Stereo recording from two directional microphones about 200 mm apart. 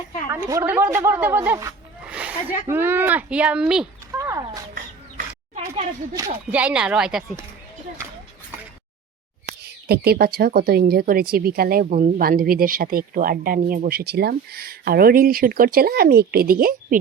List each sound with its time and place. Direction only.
0.4 s speech: 15° right (ahead or behind)
4.1 s a sound: 15° right (ahead or behind)
6.1 s speech: 15° right (ahead or behind)
6.6 s speech: 5° right (ahead or behind)
9.8 s speech: 50° right (ahead or behind)